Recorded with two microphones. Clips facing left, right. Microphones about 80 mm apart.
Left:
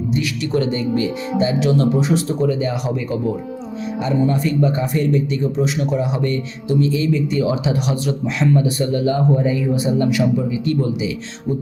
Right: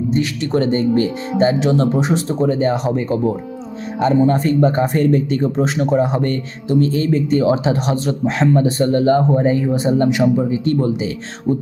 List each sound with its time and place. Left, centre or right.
0.1 s speech: right
1.5 s speech: right
2.5 s speech: right